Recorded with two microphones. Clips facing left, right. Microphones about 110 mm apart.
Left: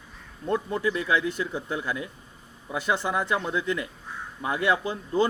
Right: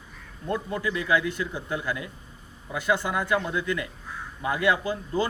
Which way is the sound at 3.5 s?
25° left (ahead or behind).